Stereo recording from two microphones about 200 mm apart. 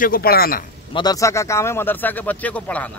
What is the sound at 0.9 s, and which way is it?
A man's voice, 20° left (ahead or behind).